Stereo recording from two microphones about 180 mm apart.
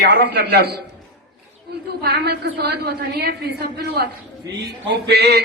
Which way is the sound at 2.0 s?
60° right (ahead or behind).